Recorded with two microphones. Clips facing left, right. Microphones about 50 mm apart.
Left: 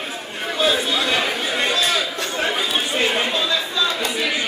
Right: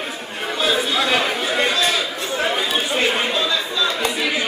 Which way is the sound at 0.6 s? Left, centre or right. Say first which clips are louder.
Even; centre.